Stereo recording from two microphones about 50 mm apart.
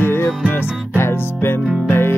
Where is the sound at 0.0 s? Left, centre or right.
Left.